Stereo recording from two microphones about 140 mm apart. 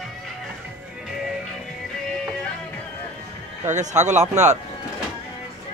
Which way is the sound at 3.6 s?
60° right (ahead or behind).